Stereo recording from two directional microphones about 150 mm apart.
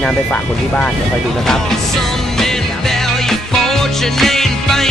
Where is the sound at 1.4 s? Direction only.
Centre (ahead or behind).